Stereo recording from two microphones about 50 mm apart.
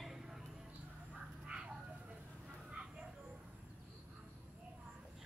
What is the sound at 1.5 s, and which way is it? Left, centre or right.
Bird, right.